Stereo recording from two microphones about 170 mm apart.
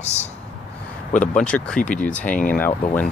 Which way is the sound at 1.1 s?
45° left (ahead or behind).